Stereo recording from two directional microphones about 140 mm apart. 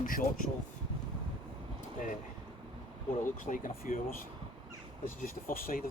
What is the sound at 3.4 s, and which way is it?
Speech, 70° left (ahead or behind).